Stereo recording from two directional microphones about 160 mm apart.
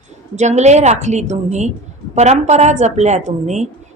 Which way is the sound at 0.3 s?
45° right (ahead or behind).